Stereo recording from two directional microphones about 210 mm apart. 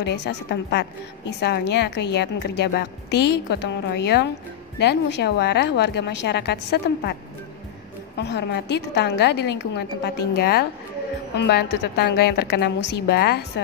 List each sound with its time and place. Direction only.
0.0 s a woman's voice: 55° left (ahead or behind)
8.2 s a woman's voice: 55° left (ahead or behind)